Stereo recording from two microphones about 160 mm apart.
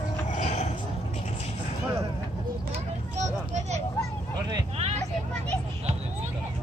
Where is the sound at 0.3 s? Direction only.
45° left (ahead or behind).